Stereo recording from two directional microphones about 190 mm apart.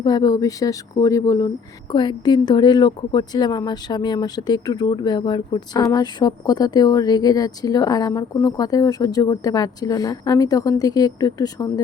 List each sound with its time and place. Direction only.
0.0 s a woman's voice: 20° left (ahead or behind)